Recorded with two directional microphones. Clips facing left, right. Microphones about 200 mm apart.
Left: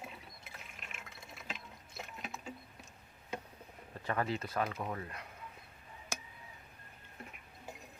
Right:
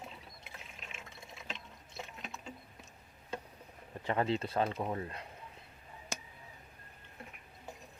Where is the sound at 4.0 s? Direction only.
20° right (ahead or behind).